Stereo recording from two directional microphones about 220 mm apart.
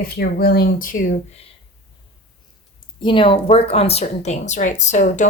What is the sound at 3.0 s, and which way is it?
A woman's voice, 20° left (ahead or behind).